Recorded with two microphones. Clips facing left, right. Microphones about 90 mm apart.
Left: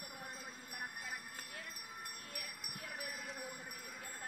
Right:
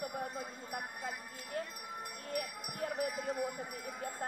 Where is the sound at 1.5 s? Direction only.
40° right (ahead or behind).